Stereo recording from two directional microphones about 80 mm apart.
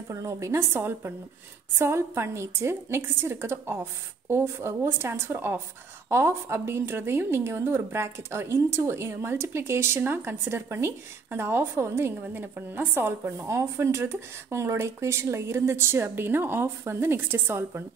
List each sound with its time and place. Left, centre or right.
0.1 s a woman's voice: right